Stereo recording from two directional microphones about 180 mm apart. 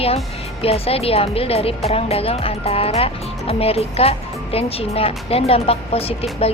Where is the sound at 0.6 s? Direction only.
35° left (ahead or behind).